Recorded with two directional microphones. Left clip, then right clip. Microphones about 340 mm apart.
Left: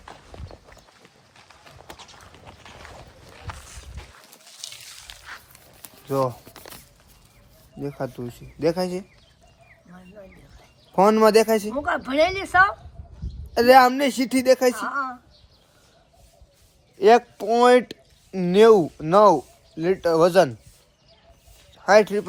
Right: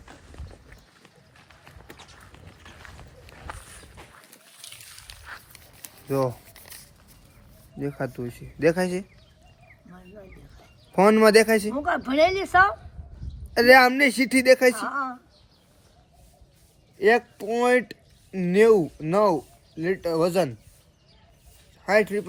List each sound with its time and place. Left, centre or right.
3.3 s walk: centre
4.5 s a sound: centre
5.1 s biting: left
6.1 s speech: centre
7.8 s a man's voice: centre
17.0 s a man's voice: centre
21.8 s a man's voice: centre